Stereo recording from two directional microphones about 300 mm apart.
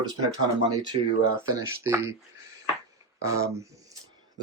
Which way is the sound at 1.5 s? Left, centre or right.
Centre.